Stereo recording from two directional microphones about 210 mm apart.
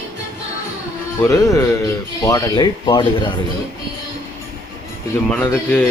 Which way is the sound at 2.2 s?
15° left (ahead or behind).